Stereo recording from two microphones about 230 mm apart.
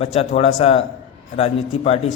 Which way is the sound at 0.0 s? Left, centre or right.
Left.